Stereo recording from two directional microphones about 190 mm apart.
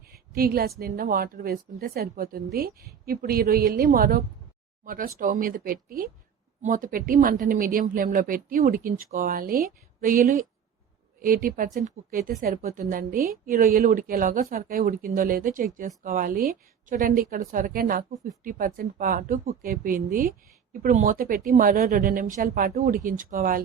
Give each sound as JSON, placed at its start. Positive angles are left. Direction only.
{"t": 0.3, "sound": "a woman's voice", "side_deg": -50}